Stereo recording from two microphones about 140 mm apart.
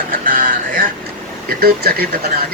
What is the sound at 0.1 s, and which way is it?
Music, 85° right.